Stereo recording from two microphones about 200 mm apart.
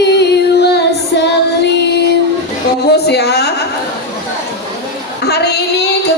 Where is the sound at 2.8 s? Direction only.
55° left (ahead or behind).